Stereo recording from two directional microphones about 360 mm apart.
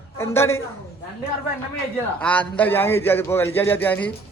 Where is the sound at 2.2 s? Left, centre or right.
Centre.